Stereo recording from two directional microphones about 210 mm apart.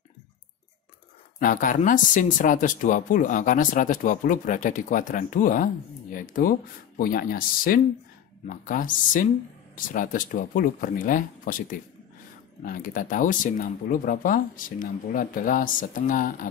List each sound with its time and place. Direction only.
1.4 s speech: 40° left (ahead or behind)
12.6 s speech: 40° left (ahead or behind)